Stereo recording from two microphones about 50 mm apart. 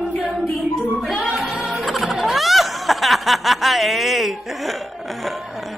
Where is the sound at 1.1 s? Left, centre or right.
Centre.